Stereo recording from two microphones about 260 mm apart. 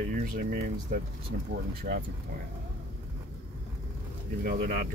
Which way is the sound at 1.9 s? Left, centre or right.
Right.